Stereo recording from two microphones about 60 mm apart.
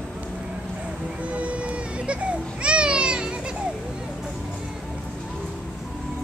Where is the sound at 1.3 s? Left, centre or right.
Right.